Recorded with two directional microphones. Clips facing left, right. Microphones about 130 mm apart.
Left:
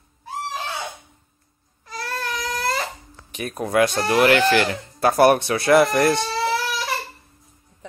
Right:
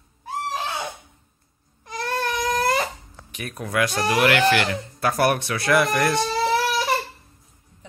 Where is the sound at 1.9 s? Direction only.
20° right (ahead or behind).